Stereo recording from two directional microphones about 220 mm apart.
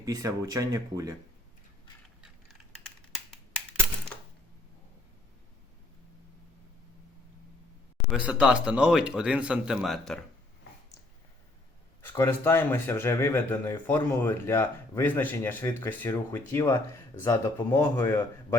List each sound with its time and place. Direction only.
0.0 s speech: 15° right (ahead or behind)
8.1 s speech: 5° right (ahead or behind)
12.0 s speech: 10° left (ahead or behind)